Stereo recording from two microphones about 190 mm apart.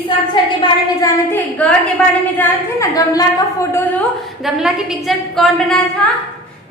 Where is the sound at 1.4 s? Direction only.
10° left (ahead or behind).